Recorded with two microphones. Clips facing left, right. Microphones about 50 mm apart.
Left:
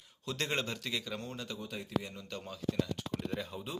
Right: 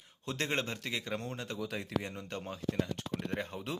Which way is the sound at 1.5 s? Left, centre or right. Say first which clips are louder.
Right 1 dB; right.